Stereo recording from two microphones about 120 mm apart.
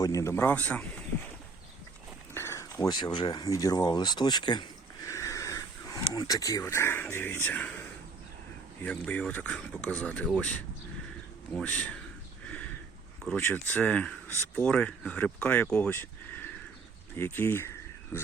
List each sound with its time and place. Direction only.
0.0 s a man's voice: 25° left (ahead or behind)
2.3 s a sound: 20° left (ahead or behind)
2.9 s speech: 35° left (ahead or behind)
5.0 s speech: 25° left (ahead or behind); by 10.2 s 10° left (ahead or behind)
11.5 s speech: 10° left (ahead or behind)
12.5 s a sound: 10° left (ahead or behind)
13.3 s speech: 15° left (ahead or behind)
15.9 s a sound: 20° left (ahead or behind)
17.2 s speech: 20° left (ahead or behind)